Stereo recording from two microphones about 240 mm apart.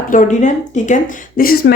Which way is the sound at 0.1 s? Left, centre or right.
Left.